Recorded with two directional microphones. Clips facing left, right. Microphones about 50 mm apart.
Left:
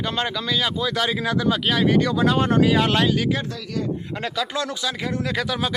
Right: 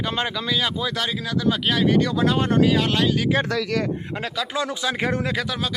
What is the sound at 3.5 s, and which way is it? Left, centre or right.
Speech, right.